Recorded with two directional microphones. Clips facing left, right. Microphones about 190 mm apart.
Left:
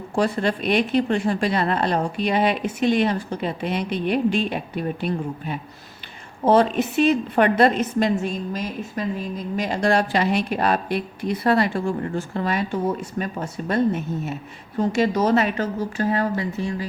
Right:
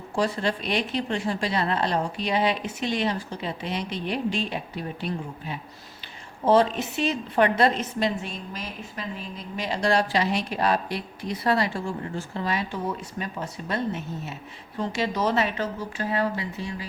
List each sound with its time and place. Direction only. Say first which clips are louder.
0.2 s a woman's voice: left 4 dB; 55° left (ahead or behind)